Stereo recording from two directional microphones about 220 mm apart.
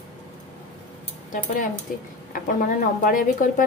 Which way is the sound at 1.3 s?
40° left (ahead or behind).